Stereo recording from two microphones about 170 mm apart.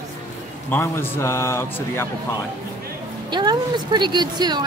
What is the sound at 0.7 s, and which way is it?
Speech, 15° left (ahead or behind).